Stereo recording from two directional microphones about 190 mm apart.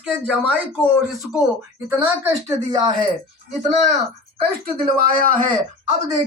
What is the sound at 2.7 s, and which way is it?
Speech, 25° right (ahead or behind).